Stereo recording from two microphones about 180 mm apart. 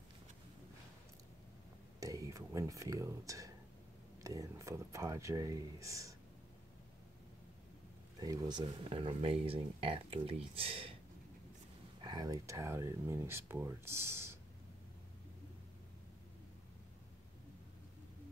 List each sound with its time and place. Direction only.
2.0 s speech: 20° right (ahead or behind)
8.2 s speech: 20° right (ahead or behind)
12.0 s speech: 20° right (ahead or behind)